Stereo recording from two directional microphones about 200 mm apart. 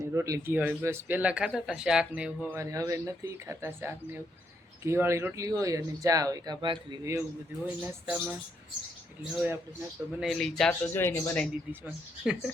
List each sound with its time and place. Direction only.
0.1 s speech: 15° right (ahead or behind)
7.6 s a man's voice: 5° right (ahead or behind)
10.2 s a man's voice: centre (ahead or behind)
11.7 s a man's voice: 5° right (ahead or behind)